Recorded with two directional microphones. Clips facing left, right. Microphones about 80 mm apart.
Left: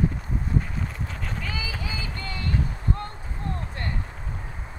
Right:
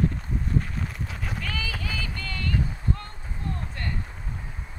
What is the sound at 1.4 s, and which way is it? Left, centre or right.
Clip-clop, centre.